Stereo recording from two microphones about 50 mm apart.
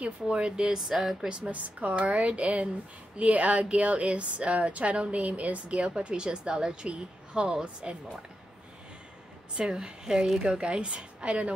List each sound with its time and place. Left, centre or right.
0.0 s speech: right
0.7 s speech: centre
1.3 s speech: right
9.6 s speech: centre